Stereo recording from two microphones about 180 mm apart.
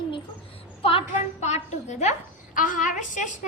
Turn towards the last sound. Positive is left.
turn(degrees=45)  # may be behind; listen again after turning